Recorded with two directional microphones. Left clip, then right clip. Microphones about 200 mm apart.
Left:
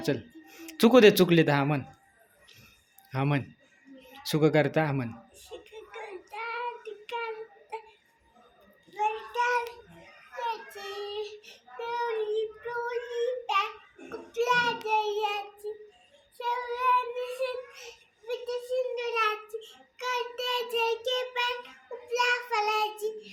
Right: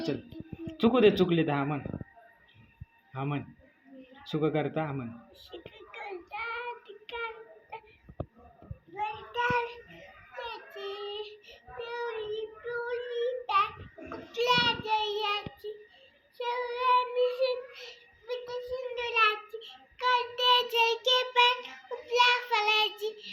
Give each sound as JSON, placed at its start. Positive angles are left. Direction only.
{"t": 0.9, "sound": "speech", "side_deg": 50}
{"t": 3.1, "sound": "speech", "side_deg": 60}
{"t": 5.5, "sound": "child singing", "side_deg": 15}
{"t": 9.0, "sound": "child singing", "side_deg": 15}
{"t": 10.4, "sound": "child singing", "side_deg": 20}